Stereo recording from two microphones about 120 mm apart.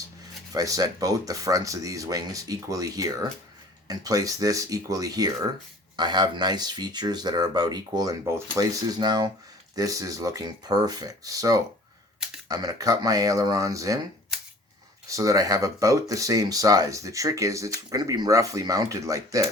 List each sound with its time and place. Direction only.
0.5 s speech: 30° right (ahead or behind)
15.1 s speech: 25° right (ahead or behind)